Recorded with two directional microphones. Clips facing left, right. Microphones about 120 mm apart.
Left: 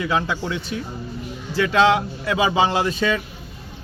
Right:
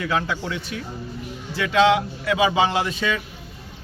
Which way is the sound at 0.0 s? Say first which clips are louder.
Left 2 dB; 20° left (ahead or behind).